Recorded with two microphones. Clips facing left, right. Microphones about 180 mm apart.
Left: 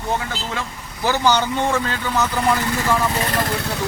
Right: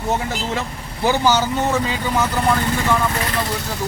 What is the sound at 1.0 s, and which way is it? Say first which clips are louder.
Speech: right 1 dB; 10° right (ahead or behind).